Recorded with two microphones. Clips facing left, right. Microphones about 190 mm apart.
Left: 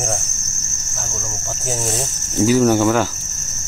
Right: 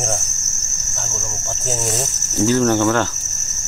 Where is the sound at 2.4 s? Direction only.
10° left (ahead or behind).